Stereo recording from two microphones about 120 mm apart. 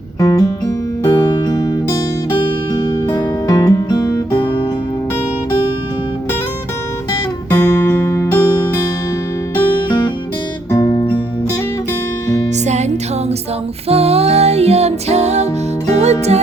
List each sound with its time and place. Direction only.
0.2 s guitar: 30° left (ahead or behind)
1.1 s music: 35° left (ahead or behind)
3.1 s music: 30° left (ahead or behind)
7.5 s music: 20° left (ahead or behind)
10.7 s music: 30° left (ahead or behind)
12.6 s music: 70° right (ahead or behind)
13.8 s music: 55° right (ahead or behind)